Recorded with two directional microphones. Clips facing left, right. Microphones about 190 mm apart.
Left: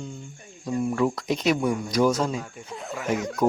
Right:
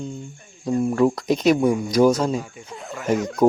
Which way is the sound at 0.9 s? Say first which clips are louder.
Right 6 dB; 40° right (ahead or behind).